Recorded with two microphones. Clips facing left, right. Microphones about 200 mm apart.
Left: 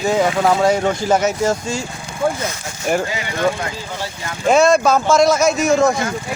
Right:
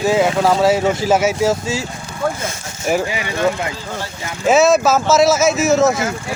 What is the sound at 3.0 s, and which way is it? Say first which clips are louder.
Speech: right 1 dB; 20° right (ahead or behind).